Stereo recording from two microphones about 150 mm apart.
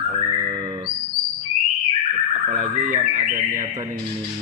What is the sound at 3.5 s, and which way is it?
Speech, 25° right (ahead or behind).